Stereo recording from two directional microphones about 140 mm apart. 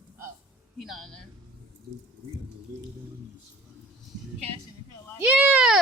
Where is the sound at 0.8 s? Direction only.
Centre (ahead or behind).